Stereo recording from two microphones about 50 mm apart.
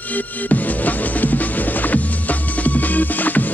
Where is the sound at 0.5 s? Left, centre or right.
Left.